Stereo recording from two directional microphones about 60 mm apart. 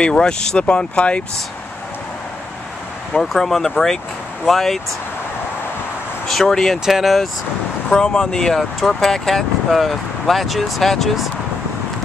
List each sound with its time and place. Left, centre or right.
0.0 s speech: centre
3.2 s speech: centre
6.2 s speech: centre
6.9 s speech: centre
7.9 s speech: centre